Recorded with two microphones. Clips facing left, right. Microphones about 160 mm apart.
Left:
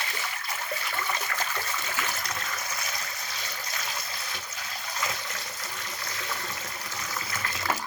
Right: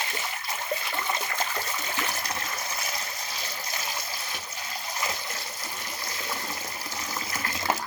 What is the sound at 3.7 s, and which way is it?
Water, 25° right (ahead or behind).